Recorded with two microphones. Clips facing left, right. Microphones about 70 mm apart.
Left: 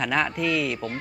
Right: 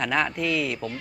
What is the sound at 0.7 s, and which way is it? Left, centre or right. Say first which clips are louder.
Speech: left 1 dB; left.